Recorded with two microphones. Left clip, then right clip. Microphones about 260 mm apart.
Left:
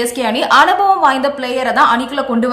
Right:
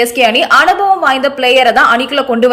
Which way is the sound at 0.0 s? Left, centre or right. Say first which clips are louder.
Right 7 dB; centre.